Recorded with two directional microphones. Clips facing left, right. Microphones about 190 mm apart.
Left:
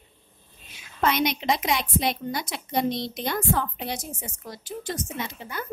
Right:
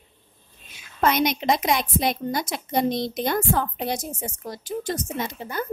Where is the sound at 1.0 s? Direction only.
45° right (ahead or behind).